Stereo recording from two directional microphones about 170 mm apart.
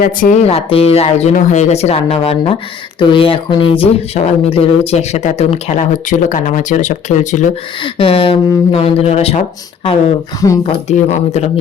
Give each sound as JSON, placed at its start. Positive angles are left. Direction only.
{"t": 0.0, "sound": "speech", "side_deg": 50}
{"t": 7.9, "sound": "speech", "side_deg": 30}
{"t": 10.7, "sound": "speech", "side_deg": 40}